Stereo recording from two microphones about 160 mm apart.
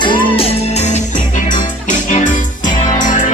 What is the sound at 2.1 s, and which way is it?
Music, 50° left (ahead or behind).